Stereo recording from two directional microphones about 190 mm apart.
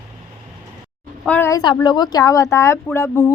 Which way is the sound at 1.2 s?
10° left (ahead or behind).